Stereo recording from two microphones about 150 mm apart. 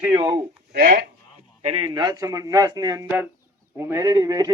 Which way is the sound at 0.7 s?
75° right (ahead or behind).